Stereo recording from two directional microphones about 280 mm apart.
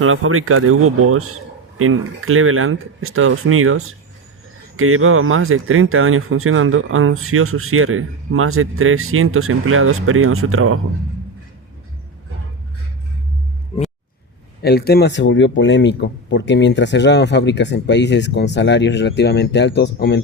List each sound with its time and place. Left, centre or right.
0.0 s speech: right
14.6 s speech: left